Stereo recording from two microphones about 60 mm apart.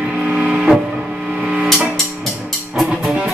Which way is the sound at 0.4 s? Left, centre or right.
Centre.